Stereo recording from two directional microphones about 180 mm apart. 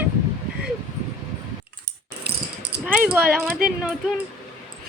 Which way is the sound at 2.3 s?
60° right (ahead or behind).